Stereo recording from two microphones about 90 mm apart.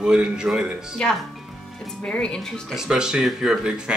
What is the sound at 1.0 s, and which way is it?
Speech, 10° left (ahead or behind).